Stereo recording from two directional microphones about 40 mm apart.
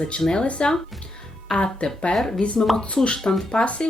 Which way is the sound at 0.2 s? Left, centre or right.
Centre.